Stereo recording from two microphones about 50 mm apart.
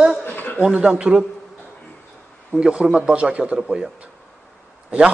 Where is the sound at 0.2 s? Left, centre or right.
Left.